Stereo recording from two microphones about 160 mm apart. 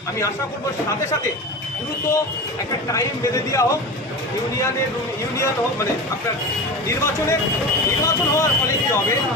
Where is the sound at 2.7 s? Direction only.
20° left (ahead or behind).